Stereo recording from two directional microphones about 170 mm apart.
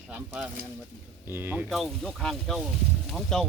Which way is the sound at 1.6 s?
Centre (ahead or behind).